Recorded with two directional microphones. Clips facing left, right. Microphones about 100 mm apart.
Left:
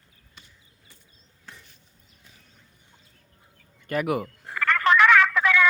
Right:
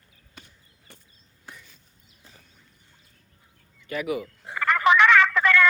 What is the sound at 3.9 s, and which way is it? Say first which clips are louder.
Speech: left 3 dB; 50° left (ahead or behind).